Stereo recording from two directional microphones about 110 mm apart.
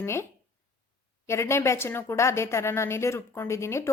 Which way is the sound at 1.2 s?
25° left (ahead or behind).